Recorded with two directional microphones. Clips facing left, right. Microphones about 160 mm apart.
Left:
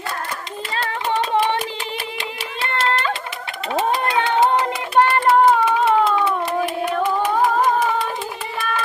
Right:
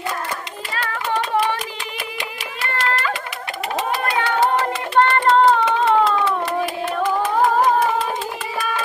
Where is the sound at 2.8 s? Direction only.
25° left (ahead or behind).